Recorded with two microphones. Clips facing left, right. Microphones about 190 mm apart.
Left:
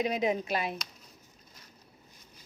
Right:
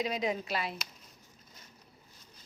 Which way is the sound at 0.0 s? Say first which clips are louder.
Left 4 dB; 20° left (ahead or behind).